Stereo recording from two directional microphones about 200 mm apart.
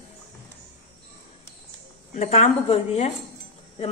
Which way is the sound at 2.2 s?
30° left (ahead or behind).